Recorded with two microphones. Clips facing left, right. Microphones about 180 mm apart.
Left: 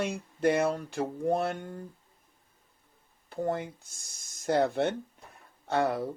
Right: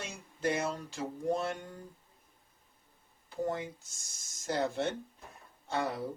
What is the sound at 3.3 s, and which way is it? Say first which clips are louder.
Speech: left 3 dB; 60° left (ahead or behind).